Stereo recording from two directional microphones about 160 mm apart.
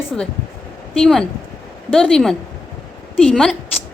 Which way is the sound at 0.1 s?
5° left (ahead or behind).